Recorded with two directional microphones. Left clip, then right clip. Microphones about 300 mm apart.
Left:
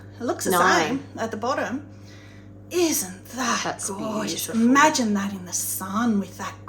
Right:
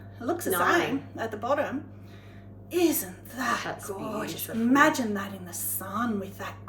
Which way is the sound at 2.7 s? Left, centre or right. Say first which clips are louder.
Left 3 dB; centre.